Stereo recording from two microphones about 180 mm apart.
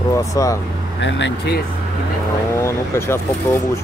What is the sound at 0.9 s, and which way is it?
Speech, 90° left.